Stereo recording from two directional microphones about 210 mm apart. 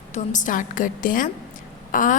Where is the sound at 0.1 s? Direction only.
35° left (ahead or behind).